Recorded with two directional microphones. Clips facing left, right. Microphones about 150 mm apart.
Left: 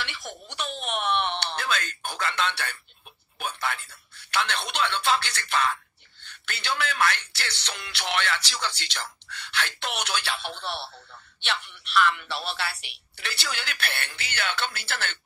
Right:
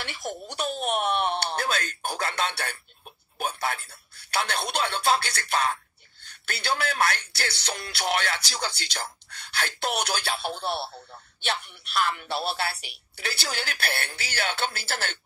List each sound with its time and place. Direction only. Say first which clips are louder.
0.0 s speech: right 3 dB; 40° right (ahead or behind)